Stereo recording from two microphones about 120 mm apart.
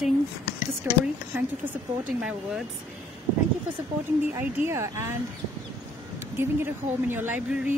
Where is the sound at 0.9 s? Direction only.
20° right (ahead or behind).